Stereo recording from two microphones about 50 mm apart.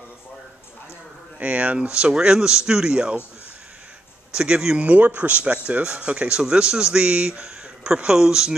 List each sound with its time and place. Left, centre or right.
1.4 s speech: right
4.3 s speech: centre